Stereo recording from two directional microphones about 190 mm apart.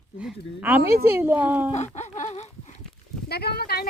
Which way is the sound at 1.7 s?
35° left (ahead or behind).